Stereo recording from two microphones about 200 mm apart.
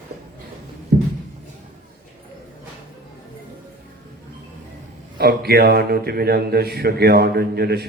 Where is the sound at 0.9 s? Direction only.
55° right (ahead or behind).